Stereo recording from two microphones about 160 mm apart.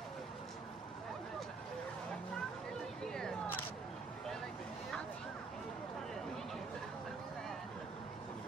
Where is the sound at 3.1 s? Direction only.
5° left (ahead or behind).